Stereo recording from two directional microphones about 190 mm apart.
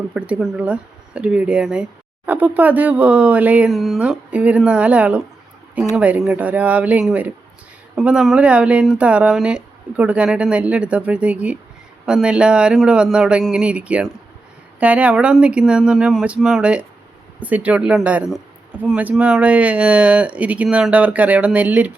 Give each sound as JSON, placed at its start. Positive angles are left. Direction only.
{"t": 0.1, "sound": "speech", "side_deg": -5}